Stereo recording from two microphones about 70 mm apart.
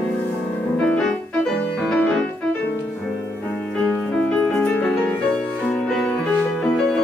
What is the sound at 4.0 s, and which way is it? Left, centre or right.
Music, centre.